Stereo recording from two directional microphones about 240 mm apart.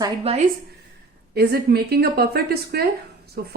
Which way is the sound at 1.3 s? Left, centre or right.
Right.